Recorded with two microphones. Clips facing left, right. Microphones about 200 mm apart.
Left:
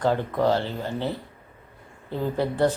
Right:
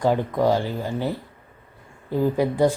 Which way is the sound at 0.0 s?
15° right (ahead or behind).